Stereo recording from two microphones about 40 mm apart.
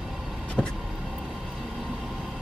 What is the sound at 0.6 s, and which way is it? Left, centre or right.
Vehicle, centre.